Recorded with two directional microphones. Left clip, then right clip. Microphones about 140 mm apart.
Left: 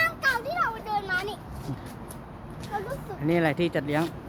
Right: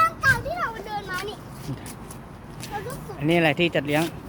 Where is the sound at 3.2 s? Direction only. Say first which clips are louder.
Right 4 dB; 5° right (ahead or behind).